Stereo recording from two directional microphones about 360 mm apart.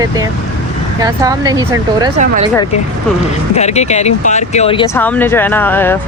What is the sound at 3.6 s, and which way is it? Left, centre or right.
Speech, centre.